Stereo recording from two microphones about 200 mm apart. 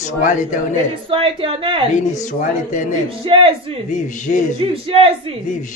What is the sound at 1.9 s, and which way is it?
Speech, 40° left (ahead or behind).